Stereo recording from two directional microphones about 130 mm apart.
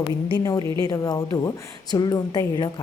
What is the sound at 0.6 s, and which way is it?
Speech, 40° right (ahead or behind).